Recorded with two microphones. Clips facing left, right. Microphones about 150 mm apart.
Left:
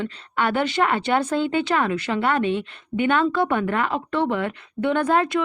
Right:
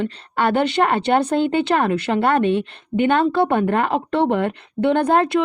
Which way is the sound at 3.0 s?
30° right (ahead or behind).